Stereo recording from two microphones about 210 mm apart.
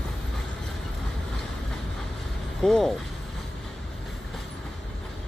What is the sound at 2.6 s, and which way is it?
Speech, centre (ahead or behind).